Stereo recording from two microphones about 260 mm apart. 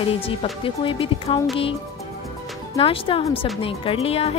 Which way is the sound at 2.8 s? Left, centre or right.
Left.